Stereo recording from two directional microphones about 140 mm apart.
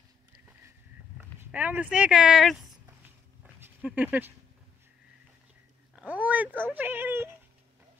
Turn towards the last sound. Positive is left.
turn(degrees=-15)  # may be behind; listen again after turning